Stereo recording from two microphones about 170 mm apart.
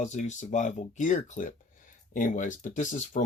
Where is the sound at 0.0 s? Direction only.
45° left (ahead or behind).